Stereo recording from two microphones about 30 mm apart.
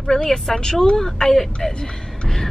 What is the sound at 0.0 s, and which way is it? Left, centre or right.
Speech, centre.